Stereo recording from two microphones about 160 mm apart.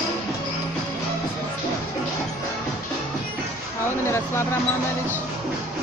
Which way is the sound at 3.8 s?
15° left (ahead or behind).